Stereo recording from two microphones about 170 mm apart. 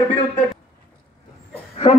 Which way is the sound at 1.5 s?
35° left (ahead or behind).